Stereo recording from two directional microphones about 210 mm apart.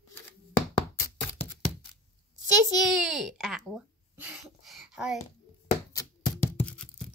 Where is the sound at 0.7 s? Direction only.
15° left (ahead or behind).